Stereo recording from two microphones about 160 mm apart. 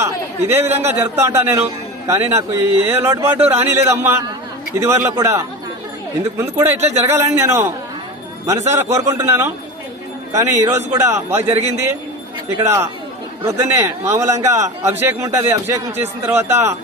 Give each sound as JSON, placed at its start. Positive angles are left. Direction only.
{"t": 0.0, "sound": "a man's voice", "side_deg": -15}
{"t": 0.7, "sound": "speech", "side_deg": -45}
{"t": 0.9, "sound": "a man's voice", "side_deg": -15}
{"t": 12.6, "sound": "a man's voice", "side_deg": -15}